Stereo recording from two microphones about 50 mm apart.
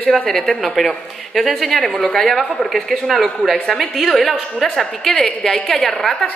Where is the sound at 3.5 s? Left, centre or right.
Centre.